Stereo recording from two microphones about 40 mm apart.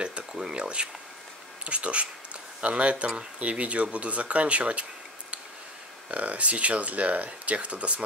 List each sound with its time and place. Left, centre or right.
0.0 s a sound: right
1.6 s speech: right
6.0 s speech: right